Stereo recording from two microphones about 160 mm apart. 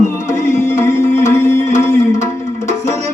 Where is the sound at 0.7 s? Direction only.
15° left (ahead or behind).